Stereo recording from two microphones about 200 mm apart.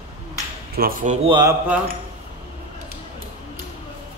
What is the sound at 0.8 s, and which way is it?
Speech, 45° right (ahead or behind).